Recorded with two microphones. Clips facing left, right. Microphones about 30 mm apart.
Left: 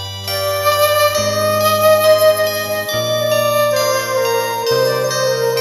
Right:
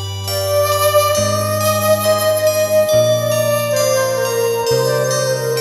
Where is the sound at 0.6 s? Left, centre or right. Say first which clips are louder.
Left 3 dB; centre.